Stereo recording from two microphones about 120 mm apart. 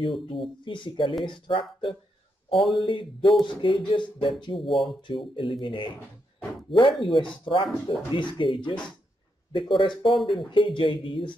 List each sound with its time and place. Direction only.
0.0 s speech: 45° left (ahead or behind)
2.5 s speech: centre (ahead or behind)
2.8 s speech: 45° left (ahead or behind)
4.6 s speech: centre (ahead or behind)
5.0 s speech: 45° left (ahead or behind)
6.7 s speech: centre (ahead or behind)
7.4 s speech: 45° left (ahead or behind)
10.0 s speech: centre (ahead or behind)
10.5 s speech: 45° left (ahead or behind)